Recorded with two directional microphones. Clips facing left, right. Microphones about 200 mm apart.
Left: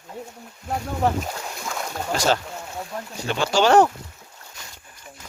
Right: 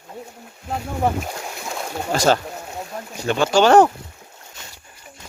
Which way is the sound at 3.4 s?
50° right (ahead or behind).